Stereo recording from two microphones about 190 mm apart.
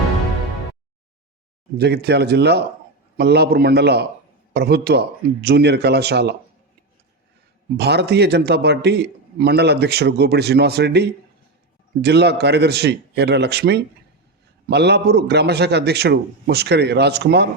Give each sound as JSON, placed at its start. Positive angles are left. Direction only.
{"t": 1.8, "sound": "a man's voice", "side_deg": -60}
{"t": 7.8, "sound": "a man's voice", "side_deg": -60}